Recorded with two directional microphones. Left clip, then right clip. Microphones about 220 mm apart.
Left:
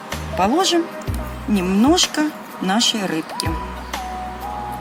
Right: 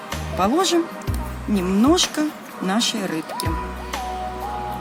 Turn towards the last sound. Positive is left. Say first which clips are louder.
# left 2 dB
turn(degrees=10)  # may be behind; listen again after turning